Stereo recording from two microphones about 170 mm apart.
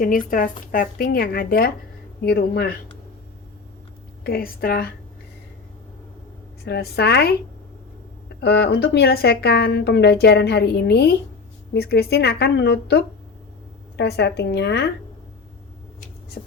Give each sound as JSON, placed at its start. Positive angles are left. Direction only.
{"t": 0.0, "sound": "speech", "side_deg": 55}
{"t": 4.2, "sound": "speech", "side_deg": 60}
{"t": 6.7, "sound": "speech", "side_deg": 70}
{"t": 8.4, "sound": "a woman's voice", "side_deg": 80}